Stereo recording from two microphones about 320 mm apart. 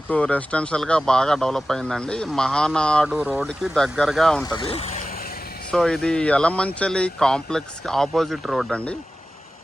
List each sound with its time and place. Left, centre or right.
0.1 s speech: centre
4.5 s speech: centre
5.7 s speech: centre